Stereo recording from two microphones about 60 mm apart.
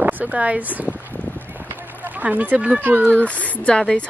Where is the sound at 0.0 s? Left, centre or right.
Right.